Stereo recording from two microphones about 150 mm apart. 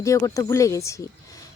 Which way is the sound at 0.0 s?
20° left (ahead or behind).